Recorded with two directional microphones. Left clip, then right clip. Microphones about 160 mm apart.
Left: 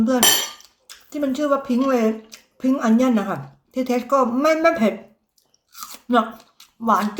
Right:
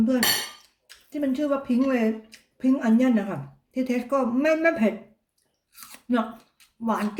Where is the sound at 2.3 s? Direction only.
15° right (ahead or behind).